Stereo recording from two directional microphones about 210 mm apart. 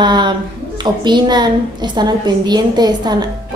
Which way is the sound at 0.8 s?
20° right (ahead or behind).